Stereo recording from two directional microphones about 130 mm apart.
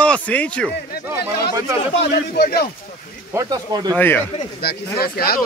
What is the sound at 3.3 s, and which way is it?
Speech, 30° right (ahead or behind).